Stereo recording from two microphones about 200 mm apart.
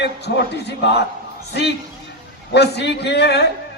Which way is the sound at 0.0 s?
55° left (ahead or behind).